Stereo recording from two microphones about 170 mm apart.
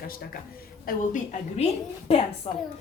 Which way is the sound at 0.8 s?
45° left (ahead or behind).